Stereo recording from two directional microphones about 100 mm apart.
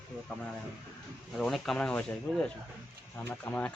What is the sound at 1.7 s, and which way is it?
Speech, 10° left (ahead or behind).